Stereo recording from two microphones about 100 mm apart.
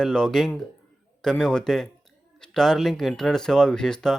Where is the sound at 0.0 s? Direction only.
5° left (ahead or behind).